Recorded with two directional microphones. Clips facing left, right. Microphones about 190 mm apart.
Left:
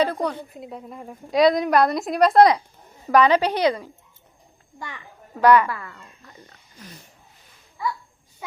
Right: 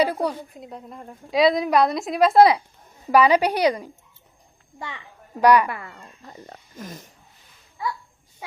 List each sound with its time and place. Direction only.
0.0 s a woman's voice: 10° right (ahead or behind)
6.2 s speech: 40° right (ahead or behind)